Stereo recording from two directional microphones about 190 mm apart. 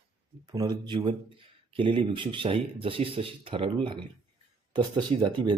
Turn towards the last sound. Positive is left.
turn(degrees=-25)  # may be behind; listen again after turning